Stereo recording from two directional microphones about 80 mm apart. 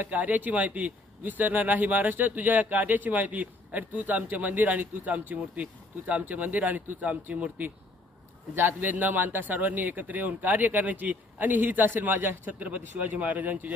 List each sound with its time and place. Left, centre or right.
0.0 s speech: right